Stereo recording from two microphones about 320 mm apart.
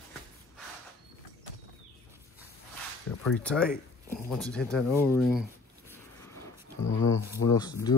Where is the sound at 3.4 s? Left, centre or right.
Centre.